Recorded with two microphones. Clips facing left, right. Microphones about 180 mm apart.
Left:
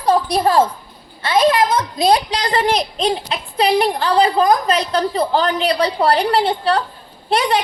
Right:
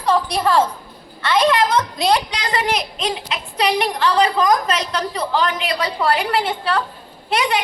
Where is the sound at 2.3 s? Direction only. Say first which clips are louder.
Left 4 dB; 35° left (ahead or behind).